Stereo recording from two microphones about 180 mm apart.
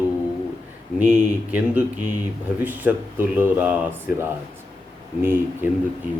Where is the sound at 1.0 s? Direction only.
10° right (ahead or behind).